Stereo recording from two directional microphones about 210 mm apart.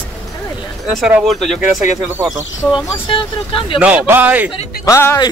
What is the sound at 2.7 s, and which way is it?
Speech, 20° left (ahead or behind).